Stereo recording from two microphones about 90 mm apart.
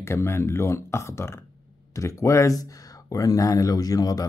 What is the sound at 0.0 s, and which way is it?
Speech, 30° left (ahead or behind).